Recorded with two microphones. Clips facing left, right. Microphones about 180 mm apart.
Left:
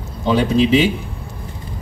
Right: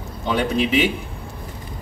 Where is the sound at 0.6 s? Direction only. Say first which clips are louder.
Left 5 dB; 30° left (ahead or behind).